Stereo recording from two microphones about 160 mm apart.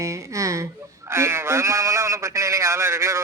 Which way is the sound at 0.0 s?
20° right (ahead or behind).